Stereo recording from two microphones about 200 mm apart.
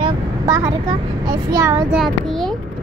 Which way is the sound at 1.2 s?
15° right (ahead or behind).